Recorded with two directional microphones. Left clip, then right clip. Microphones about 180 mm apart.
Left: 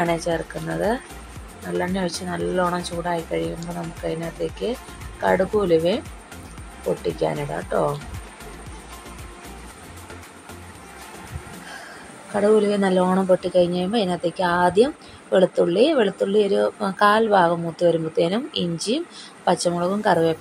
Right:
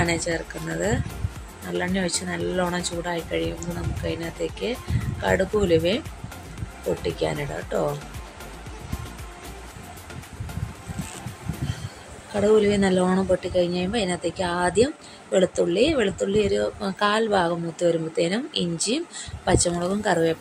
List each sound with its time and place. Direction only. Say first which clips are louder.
0.0 s speech: left 2 dB; centre (ahead or behind)
1.7 s speech: left 1 dB; centre (ahead or behind)
12.4 s speech: left 1 dB; 5° left (ahead or behind)